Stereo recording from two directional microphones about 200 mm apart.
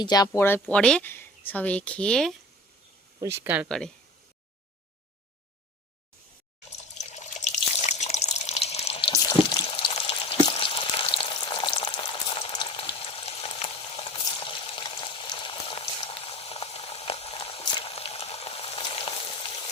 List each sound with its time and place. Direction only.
0.0 s speech: 20° left (ahead or behind); by 2.3 s 5° left (ahead or behind)
3.2 s speech: 10° right (ahead or behind)
3.7 s speech: centre (ahead or behind)
7.0 s water: 35° left (ahead or behind)
9.1 s frying: 20° left (ahead or behind)